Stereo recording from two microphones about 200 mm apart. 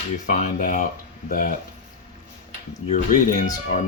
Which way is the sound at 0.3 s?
40° left (ahead or behind).